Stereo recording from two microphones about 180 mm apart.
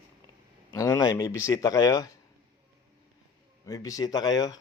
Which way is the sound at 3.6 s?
20° left (ahead or behind).